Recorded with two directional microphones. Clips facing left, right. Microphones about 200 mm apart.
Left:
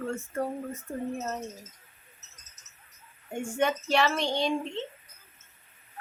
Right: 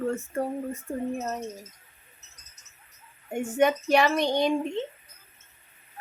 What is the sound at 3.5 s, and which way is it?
Speech, 15° right (ahead or behind).